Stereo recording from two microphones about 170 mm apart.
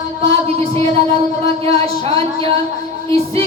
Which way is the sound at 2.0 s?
35° right (ahead or behind).